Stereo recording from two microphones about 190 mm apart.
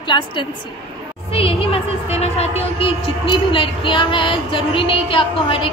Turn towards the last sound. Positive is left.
turn(degrees=25)  # may be behind; listen again after turning